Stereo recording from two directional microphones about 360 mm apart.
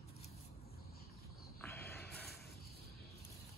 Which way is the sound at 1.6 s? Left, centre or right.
Centre.